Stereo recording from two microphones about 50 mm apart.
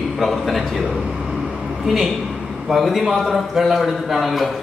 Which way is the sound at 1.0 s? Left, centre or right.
Centre.